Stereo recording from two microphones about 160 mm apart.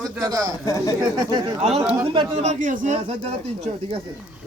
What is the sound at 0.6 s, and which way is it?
Speech, 20° left (ahead or behind).